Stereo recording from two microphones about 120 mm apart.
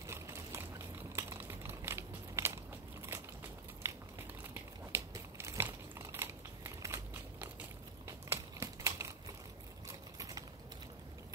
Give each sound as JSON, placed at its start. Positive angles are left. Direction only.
{"t": 0.0, "sound": "a sound", "side_deg": -20}
{"t": 3.1, "sound": "crushing", "side_deg": -20}
{"t": 3.8, "sound": "crumpling", "side_deg": -25}
{"t": 4.9, "sound": "biting", "side_deg": -25}
{"t": 8.3, "sound": "typewriter", "side_deg": -25}
{"t": 9.8, "sound": "a sound", "side_deg": -30}